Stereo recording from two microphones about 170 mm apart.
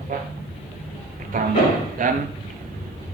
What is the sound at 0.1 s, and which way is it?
Speech, 50° right (ahead or behind).